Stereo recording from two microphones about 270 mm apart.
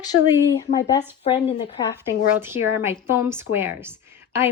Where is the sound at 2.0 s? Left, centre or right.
Centre.